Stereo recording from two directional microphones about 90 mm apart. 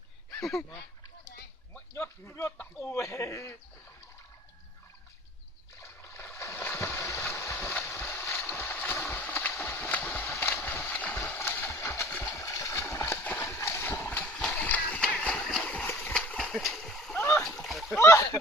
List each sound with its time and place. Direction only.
0.3 s a sound: 5° left (ahead or behind)
1.9 s speech: 30° left (ahead or behind)
5.8 s a sound: 30° left (ahead or behind)
10.1 s horse: 25° left (ahead or behind)
10.9 s a sound: 15° left (ahead or behind)
12.4 s splash: 35° left (ahead or behind)
13.4 s horse: 30° left (ahead or behind)
14.3 s horse: 10° left (ahead or behind)
15.4 s splash: 5° left (ahead or behind)
16.1 s horse: 10° left (ahead or behind)
16.5 s splash: centre (ahead or behind)
18.0 s speech: 30° left (ahead or behind)